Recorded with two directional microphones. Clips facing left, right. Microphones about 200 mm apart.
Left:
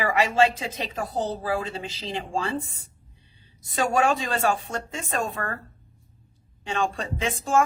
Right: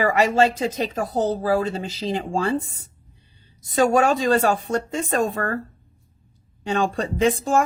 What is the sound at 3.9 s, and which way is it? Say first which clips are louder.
Speech: right 2 dB; 40° right (ahead or behind).